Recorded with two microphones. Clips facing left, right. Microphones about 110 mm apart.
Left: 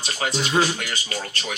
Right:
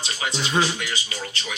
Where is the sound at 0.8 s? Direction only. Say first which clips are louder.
Left 1 dB; 50° left (ahead or behind).